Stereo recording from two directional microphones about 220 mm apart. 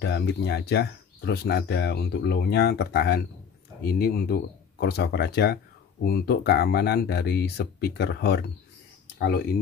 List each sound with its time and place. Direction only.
0.0 s speech: 50° left (ahead or behind)